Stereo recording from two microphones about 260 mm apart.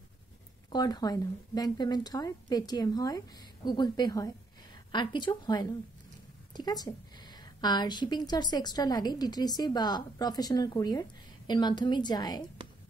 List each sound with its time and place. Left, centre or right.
0.7 s a woman's voice: centre